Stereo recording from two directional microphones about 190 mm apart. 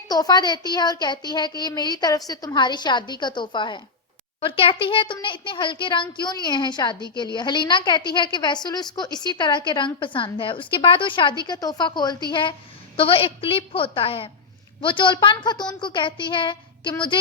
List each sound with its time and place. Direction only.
0.1 s a woman's voice: 20° left (ahead or behind)